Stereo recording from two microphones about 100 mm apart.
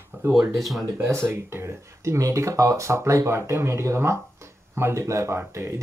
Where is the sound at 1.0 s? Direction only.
25° right (ahead or behind).